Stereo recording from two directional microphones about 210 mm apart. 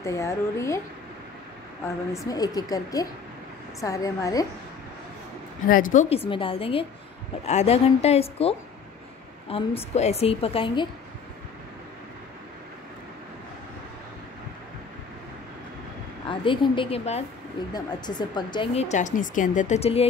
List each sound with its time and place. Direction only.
0.0 s speech: 15° left (ahead or behind)
2.2 s speech: 20° left (ahead or behind)
5.7 s a woman's voice: 40° left (ahead or behind)
16.3 s a woman's voice: 25° left (ahead or behind)